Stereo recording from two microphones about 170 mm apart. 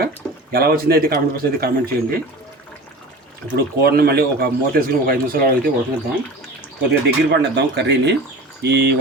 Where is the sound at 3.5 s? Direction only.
65° right (ahead or behind).